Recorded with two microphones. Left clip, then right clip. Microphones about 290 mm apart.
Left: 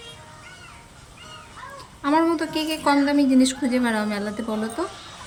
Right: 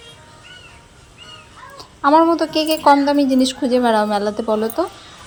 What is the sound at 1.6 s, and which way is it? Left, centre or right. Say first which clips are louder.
A woman's voice: right 11 dB; centre.